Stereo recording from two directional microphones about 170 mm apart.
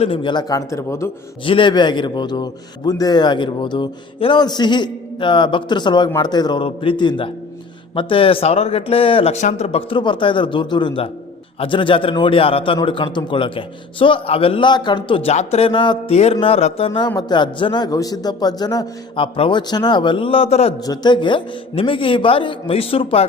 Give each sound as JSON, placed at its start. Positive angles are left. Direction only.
{"t": 0.0, "sound": "a man's voice", "side_deg": 30}
{"t": 1.5, "sound": "a man's voice", "side_deg": 30}
{"t": 20.8, "sound": "a man's voice", "side_deg": 25}